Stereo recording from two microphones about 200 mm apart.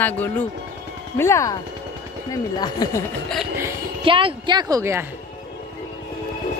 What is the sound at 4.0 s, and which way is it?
A woman's voice, 25° right (ahead or behind).